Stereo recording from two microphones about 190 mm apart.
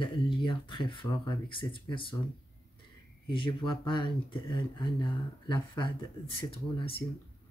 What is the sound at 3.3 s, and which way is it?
Speech, 25° left (ahead or behind).